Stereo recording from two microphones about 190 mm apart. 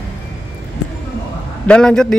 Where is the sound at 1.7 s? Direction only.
5° left (ahead or behind).